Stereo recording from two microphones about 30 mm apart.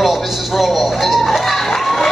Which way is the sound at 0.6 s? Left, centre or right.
Centre.